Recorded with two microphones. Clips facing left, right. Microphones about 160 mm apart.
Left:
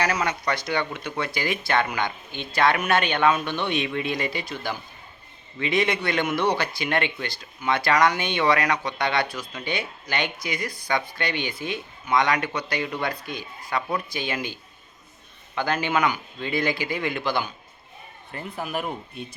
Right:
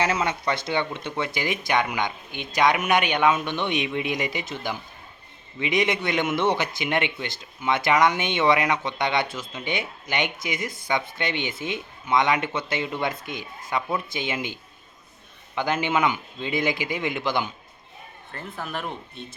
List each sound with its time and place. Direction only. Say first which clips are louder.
0.0 s a man's voice: right 1 dB; 25° right (ahead or behind)
18.3 s speech: left 3 dB; 15° left (ahead or behind)